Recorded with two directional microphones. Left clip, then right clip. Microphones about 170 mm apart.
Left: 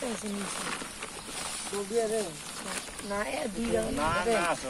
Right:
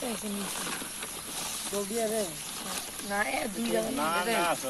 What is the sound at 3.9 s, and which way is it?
Speech, 10° left (ahead or behind).